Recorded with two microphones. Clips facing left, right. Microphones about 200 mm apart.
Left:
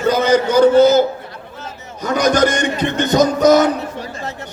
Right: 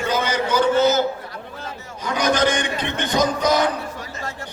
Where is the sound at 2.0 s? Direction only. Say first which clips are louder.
Left 5 dB; 45° left (ahead or behind).